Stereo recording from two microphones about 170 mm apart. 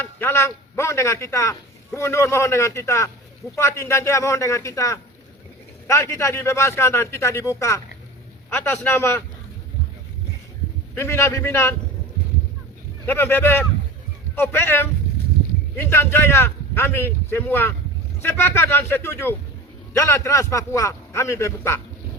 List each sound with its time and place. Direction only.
0.0 s a man's voice: 15° left (ahead or behind)
8.4 s a man's voice: 10° left (ahead or behind)
10.9 s a man's voice: 15° left (ahead or behind)
13.1 s a man's voice: 10° left (ahead or behind)